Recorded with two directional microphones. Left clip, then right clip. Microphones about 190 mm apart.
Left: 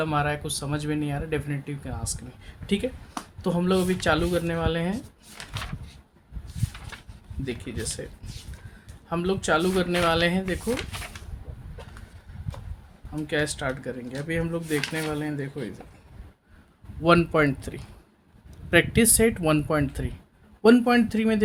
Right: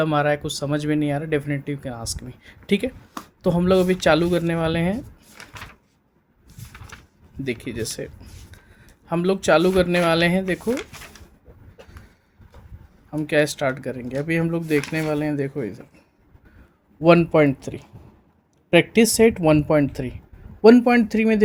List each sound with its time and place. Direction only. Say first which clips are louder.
0.0 s speech: right 6 dB; 40° right (ahead or behind)
7.4 s speech: right 5 dB; 45° right (ahead or behind)
9.0 s speech: right 6 dB; 45° right (ahead or behind)
13.1 s speech: right 7 dB; 45° right (ahead or behind)
17.0 s speech: right 5 dB; 20° right (ahead or behind)